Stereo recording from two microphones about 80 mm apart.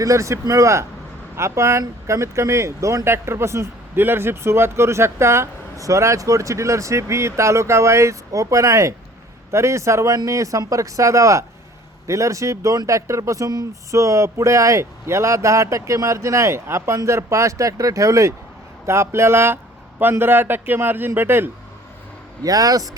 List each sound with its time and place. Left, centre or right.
0.0 s a man's voice: right
22.4 s speech: right